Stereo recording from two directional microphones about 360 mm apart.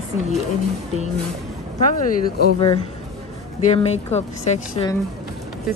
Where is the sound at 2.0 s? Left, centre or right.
Centre.